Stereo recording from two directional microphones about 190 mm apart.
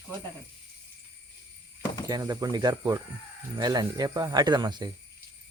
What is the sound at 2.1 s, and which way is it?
Speech, 20° right (ahead or behind).